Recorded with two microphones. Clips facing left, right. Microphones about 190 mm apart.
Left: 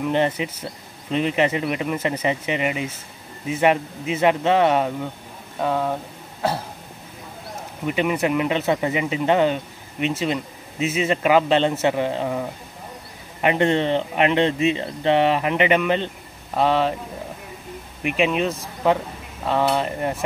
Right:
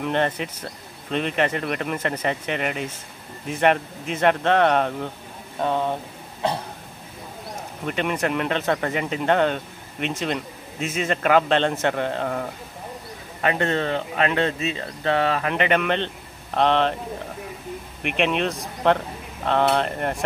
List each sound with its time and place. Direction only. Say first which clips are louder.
0.0 s speech: left 2 dB; 10° left (ahead or behind)
7.8 s speech: left 3 dB; 5° left (ahead or behind)
18.0 s speech: left 2 dB; 5° left (ahead or behind)